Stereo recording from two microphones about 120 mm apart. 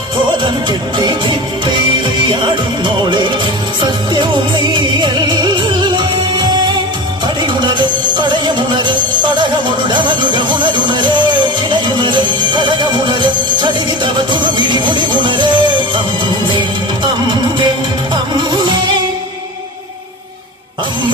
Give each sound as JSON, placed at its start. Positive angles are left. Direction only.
{"t": 0.4, "sound": "music", "side_deg": -40}
{"t": 2.3, "sound": "music", "side_deg": -40}
{"t": 8.1, "sound": "music", "side_deg": -40}
{"t": 14.7, "sound": "music", "side_deg": -40}
{"t": 18.1, "sound": "music", "side_deg": -40}